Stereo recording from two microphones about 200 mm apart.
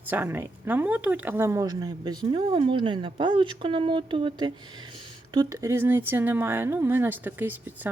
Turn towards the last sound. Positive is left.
turn(degrees=-10)  # may be behind; listen again after turning